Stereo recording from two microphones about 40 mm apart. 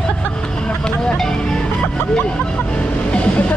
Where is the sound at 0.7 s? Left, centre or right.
Left.